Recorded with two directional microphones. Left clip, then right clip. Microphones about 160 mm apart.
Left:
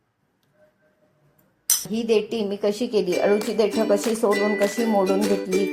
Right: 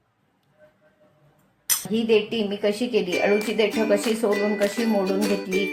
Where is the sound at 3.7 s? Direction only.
10° left (ahead or behind).